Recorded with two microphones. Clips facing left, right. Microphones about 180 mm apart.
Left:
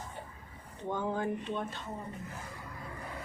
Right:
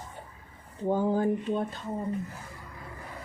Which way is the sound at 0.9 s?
35° right (ahead or behind).